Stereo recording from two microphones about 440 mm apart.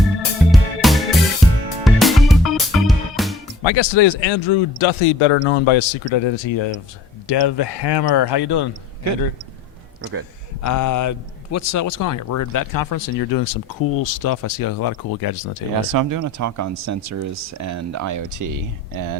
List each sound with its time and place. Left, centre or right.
0.3 s music: centre
3.6 s speech: left
7.3 s speech: left
10.0 s speech: right
10.6 s speech: left
15.9 s speech: right